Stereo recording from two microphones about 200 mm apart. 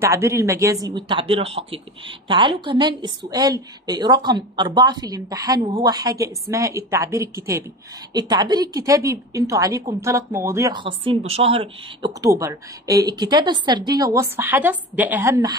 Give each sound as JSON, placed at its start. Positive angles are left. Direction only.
{"t": 0.0, "sound": "a woman's voice", "side_deg": -15}
{"t": 12.2, "sound": "a woman's voice", "side_deg": -15}